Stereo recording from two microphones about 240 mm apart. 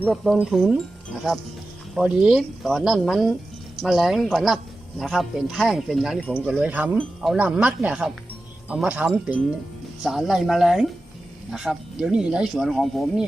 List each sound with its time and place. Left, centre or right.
0.0 s speech: centre
2.0 s speech: centre